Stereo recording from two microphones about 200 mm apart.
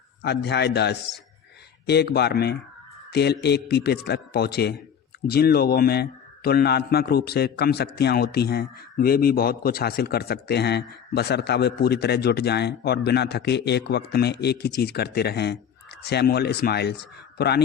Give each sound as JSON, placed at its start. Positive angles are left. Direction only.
{"t": 0.2, "sound": "a man's voice", "side_deg": 55}